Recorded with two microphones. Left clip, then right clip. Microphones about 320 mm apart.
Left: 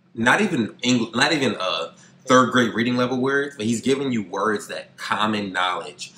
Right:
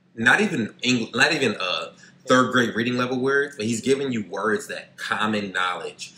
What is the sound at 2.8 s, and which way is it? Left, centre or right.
Speech, centre.